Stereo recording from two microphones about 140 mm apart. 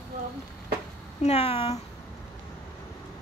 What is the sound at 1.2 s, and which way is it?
Speech, 45° left (ahead or behind).